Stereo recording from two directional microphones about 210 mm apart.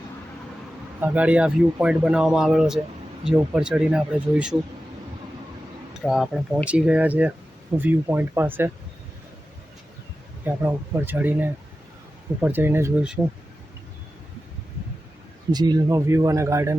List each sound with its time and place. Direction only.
0.9 s speech: 10° right (ahead or behind)
6.0 s speech: centre (ahead or behind)
10.4 s speech: 10° right (ahead or behind)
15.5 s speech: 20° right (ahead or behind)